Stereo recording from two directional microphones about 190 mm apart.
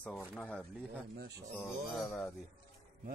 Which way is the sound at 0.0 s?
5° left (ahead or behind).